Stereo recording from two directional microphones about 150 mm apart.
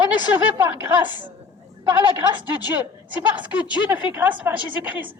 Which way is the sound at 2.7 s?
10° right (ahead or behind).